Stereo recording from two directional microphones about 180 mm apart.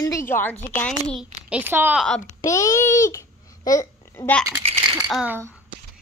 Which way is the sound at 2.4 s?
15° left (ahead or behind).